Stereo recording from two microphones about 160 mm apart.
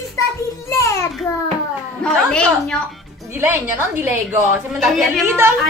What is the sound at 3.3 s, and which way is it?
Speech, 15° right (ahead or behind).